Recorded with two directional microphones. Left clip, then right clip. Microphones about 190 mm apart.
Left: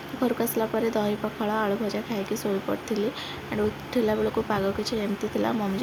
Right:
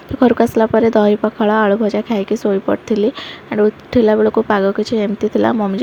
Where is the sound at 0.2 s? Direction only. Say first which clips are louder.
Right 14 dB; 40° right (ahead or behind).